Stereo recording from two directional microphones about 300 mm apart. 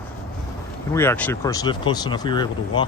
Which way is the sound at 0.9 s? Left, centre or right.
Centre.